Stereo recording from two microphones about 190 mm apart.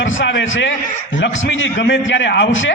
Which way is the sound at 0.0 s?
75° left (ahead or behind).